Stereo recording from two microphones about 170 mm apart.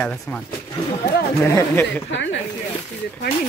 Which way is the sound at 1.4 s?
15° left (ahead or behind).